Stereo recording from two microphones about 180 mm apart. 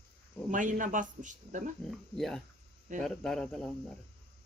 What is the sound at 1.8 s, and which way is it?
Speech, centre (ahead or behind).